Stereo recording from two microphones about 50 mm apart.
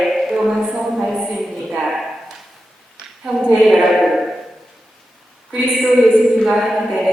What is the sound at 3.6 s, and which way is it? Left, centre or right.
Speech, centre.